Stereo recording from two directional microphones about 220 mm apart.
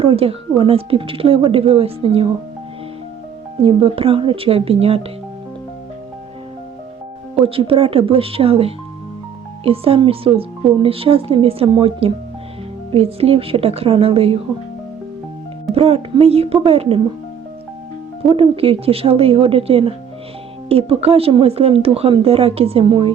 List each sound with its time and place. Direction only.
0.0 s speech: 25° right (ahead or behind)
3.6 s speech: 25° right (ahead or behind)
7.4 s speech: 25° right (ahead or behind)
15.7 s speech: 25° right (ahead or behind)
18.3 s speech: 25° right (ahead or behind)